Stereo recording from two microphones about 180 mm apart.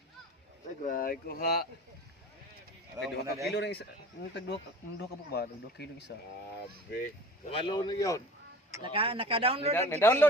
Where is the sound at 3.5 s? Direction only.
70° left (ahead or behind).